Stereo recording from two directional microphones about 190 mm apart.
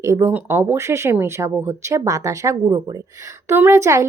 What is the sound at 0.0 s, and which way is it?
Speech, 15° right (ahead or behind).